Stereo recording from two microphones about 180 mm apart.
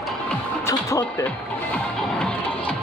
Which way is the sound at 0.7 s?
15° left (ahead or behind).